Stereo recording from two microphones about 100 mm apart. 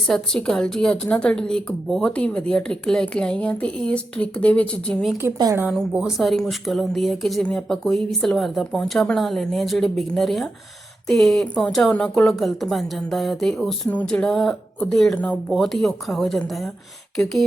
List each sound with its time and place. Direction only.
0.1 s a woman's voice: 5° left (ahead or behind)
5.2 s a woman's voice: 20° right (ahead or behind)
5.9 s a woman's voice: 5° right (ahead or behind); by 15.4 s 10° left (ahead or behind)
15.4 s a woman's voice: centre (ahead or behind)